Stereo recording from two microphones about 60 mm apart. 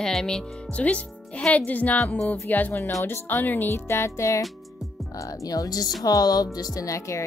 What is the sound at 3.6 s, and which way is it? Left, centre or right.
Speech, left.